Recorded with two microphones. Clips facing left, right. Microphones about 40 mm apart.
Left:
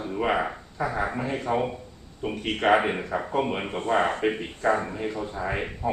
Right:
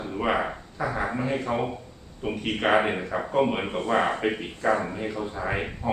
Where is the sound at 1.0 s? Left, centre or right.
Centre.